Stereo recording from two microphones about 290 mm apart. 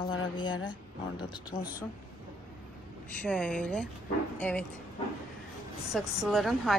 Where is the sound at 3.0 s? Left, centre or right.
Centre.